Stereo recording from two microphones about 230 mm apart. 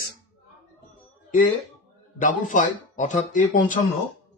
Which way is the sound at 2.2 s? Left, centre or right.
Left.